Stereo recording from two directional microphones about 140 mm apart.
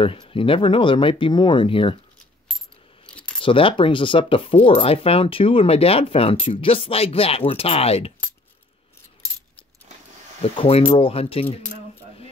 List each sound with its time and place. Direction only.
0.0 s speech: 40° left (ahead or behind)
3.1 s keys jangling: 10° left (ahead or behind)
3.4 s speech: 40° left (ahead or behind)
10.4 s speech: 40° left (ahead or behind)